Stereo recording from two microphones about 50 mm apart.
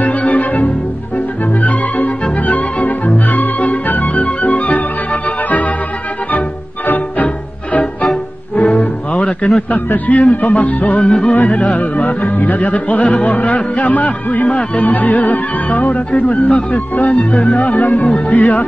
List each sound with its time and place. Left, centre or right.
0.0 s music: left
8.6 s music: left
11.0 s music: left